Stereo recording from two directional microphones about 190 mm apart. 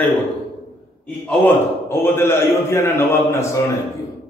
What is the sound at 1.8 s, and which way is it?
A man's voice, 15° left (ahead or behind).